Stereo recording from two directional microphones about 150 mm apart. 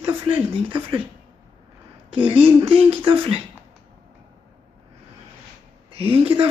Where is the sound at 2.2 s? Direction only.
35° right (ahead or behind).